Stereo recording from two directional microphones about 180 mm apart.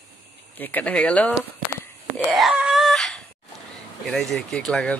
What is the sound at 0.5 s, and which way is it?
Speech, 10° left (ahead or behind).